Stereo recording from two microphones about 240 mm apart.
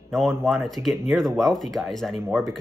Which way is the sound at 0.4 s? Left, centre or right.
Centre.